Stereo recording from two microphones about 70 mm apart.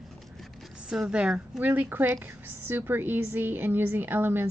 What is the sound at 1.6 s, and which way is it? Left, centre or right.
A woman's voice, right.